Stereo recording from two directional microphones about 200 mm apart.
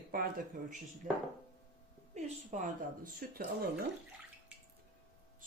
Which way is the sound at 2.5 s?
35° right (ahead or behind).